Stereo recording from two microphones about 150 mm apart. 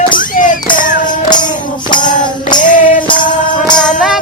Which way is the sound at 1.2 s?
30° left (ahead or behind).